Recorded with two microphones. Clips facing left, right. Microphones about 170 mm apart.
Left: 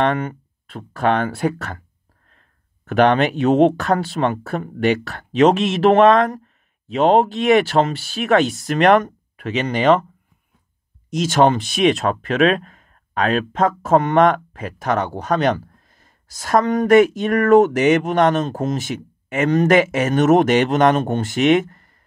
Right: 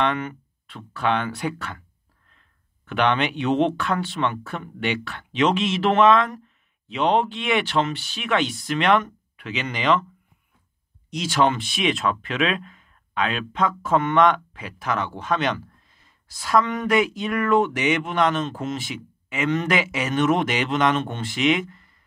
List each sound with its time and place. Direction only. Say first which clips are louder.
0.0 s speech: left 5 dB; 40° left (ahead or behind)
11.1 s speech: left 6 dB; 45° left (ahead or behind)